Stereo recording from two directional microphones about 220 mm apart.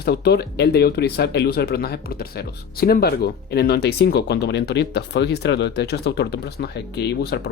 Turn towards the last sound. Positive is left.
turn(degrees=50)  # may be behind; listen again after turning